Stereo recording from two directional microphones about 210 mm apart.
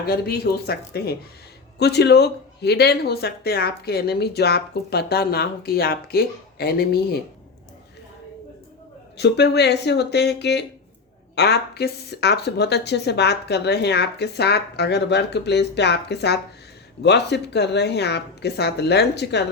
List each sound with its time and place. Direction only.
0.0 s speech: 45° left (ahead or behind)
9.1 s speech: 55° left (ahead or behind)